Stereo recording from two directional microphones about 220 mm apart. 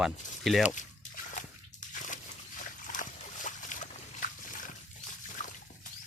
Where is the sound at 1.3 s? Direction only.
35° left (ahead or behind).